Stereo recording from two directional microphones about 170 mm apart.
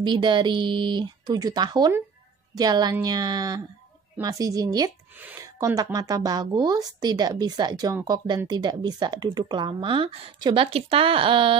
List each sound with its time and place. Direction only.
0.0 s speech: 30° right (ahead or behind)
5.1 s speech: 10° right (ahead or behind)
5.8 s speech: 20° right (ahead or behind)